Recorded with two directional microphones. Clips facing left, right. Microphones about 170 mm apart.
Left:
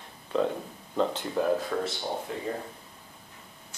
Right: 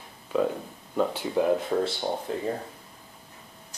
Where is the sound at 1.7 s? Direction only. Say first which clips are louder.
Right 4 dB; 25° right (ahead or behind).